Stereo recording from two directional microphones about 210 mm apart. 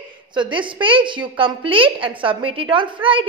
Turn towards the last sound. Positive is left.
turn(degrees=-25)  # may be behind; listen again after turning